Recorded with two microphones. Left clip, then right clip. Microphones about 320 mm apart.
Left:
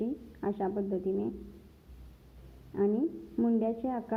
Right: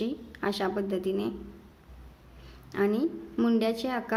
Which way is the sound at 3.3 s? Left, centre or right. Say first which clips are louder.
Right 4 dB; centre.